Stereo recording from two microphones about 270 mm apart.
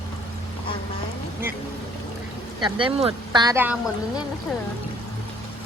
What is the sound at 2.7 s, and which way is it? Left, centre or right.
Speech, centre.